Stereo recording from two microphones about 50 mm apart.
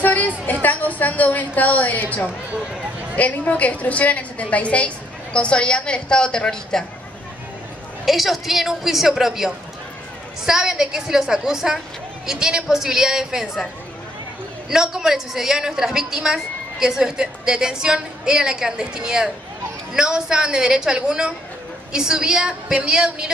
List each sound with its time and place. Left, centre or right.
0.0 s a woman's voice: left; by 6.8 s centre
8.0 s a woman's voice: centre
14.7 s a woman's voice: centre